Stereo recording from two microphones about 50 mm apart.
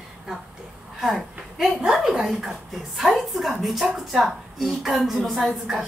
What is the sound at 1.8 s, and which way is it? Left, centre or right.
A woman's voice, centre.